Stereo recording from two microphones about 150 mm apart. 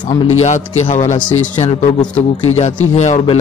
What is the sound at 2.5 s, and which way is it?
Speech, 50° left (ahead or behind).